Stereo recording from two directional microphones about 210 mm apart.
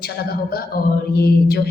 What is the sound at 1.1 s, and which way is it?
Speech, 50° left (ahead or behind).